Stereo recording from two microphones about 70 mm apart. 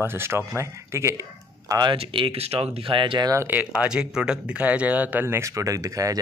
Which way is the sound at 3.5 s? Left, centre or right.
Right.